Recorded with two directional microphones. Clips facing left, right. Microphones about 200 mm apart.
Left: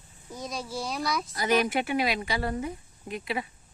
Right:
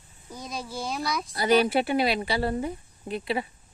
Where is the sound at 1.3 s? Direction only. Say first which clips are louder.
Right 5 dB; 30° right (ahead or behind).